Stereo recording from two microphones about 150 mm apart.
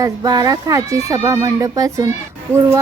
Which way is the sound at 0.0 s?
25° right (ahead or behind).